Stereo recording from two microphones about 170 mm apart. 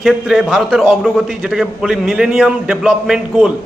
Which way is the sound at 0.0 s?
Centre (ahead or behind).